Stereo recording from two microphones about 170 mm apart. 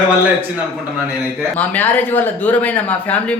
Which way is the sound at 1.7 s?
10° left (ahead or behind).